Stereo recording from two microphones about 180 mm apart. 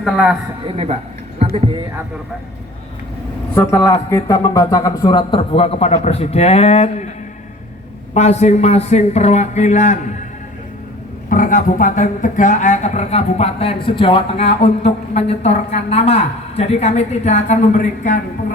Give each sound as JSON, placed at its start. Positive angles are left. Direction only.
{"t": 0.0, "sound": "a man's voice", "side_deg": -5}
{"t": 0.6, "sound": "speech", "side_deg": -35}
{"t": 3.5, "sound": "speech", "side_deg": 15}
{"t": 8.1, "sound": "speech", "side_deg": 40}
{"t": 11.3, "sound": "speech", "side_deg": 50}